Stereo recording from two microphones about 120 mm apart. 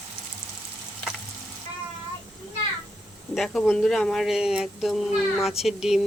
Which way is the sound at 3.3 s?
Centre (ahead or behind).